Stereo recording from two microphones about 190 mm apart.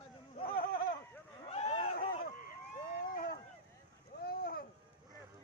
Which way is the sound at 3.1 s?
50° left (ahead or behind).